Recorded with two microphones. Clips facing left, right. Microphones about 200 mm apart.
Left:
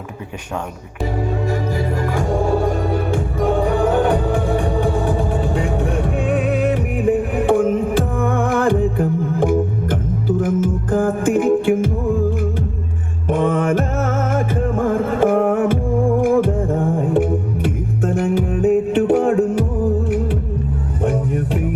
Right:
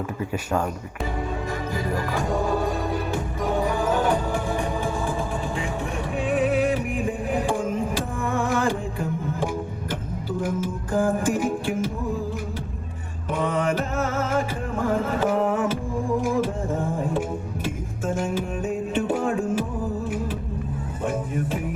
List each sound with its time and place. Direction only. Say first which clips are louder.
2.0 s music: left 5 dB; 45° left (ahead or behind)
13.2 s music: left 7 dB; 50° left (ahead or behind)
21.0 s music: left 7 dB; 65° left (ahead or behind)